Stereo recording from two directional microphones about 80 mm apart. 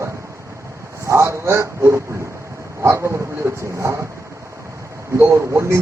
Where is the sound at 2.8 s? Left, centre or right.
Right.